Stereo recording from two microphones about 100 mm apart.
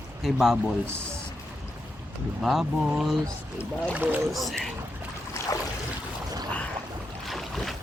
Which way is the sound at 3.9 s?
15° right (ahead or behind).